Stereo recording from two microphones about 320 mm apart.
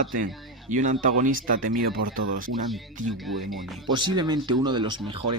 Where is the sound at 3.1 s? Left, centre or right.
Centre.